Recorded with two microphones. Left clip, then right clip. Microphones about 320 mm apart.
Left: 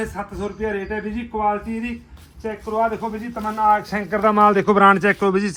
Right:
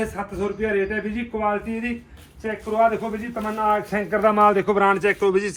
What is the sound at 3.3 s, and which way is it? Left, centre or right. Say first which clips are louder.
A man's voice: left 4 dB; centre.